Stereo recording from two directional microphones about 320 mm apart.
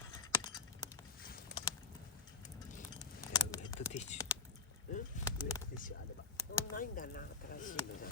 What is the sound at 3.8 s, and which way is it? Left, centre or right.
Typing, left.